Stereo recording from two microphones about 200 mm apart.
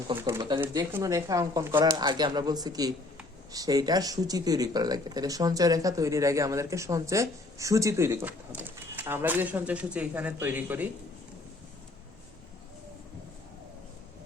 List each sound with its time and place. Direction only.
0.3 s speech: 25° right (ahead or behind)